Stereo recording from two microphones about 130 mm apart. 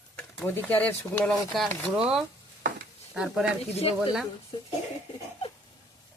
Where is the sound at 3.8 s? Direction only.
50° left (ahead or behind).